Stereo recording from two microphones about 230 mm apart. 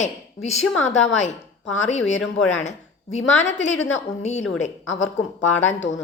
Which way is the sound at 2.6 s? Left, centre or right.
Left.